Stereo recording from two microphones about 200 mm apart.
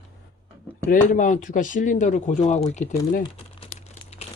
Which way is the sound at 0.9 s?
40° left (ahead or behind).